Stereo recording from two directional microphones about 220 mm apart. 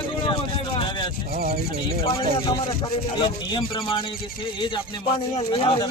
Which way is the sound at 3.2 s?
25° left (ahead or behind).